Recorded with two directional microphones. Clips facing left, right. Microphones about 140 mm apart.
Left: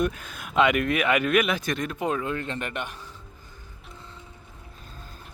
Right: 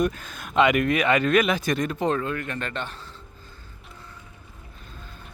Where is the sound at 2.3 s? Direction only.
20° left (ahead or behind).